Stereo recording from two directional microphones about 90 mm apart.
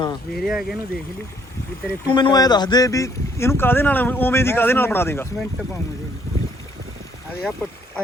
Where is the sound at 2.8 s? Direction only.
35° left (ahead or behind).